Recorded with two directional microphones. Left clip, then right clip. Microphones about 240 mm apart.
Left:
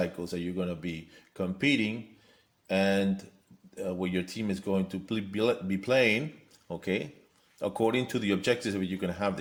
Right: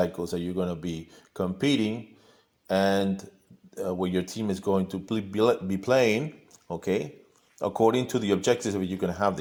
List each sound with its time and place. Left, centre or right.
0.0 s speech: centre